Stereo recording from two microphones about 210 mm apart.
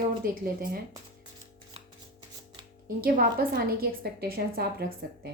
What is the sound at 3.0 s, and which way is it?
A woman's voice, 45° right (ahead or behind).